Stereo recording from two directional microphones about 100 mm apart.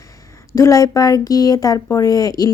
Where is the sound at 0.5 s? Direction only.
35° left (ahead or behind).